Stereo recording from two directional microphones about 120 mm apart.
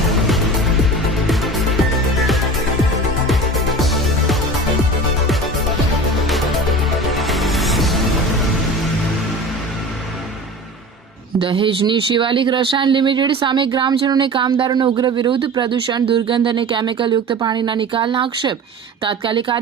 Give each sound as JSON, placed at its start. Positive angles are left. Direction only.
{"t": 0.1, "sound": "music", "side_deg": 0}
{"t": 7.2, "sound": "music", "side_deg": 0}
{"t": 11.3, "sound": "speech", "side_deg": -45}